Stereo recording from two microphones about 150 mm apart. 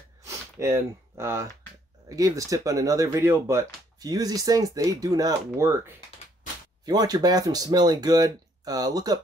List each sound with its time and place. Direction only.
0.2 s sniff: 15° right (ahead or behind)
2.0 s speech: 20° right (ahead or behind)